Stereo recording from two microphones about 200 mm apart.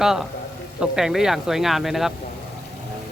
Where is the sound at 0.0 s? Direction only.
Centre (ahead or behind).